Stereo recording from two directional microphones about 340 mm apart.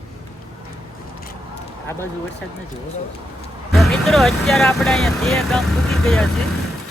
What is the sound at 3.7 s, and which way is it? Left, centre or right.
Speech, centre.